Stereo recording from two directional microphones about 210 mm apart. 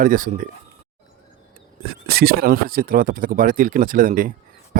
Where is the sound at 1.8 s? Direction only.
50° right (ahead or behind).